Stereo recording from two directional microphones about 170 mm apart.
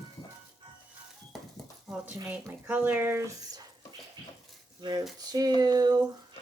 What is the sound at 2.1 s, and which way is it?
Speech, 15° right (ahead or behind).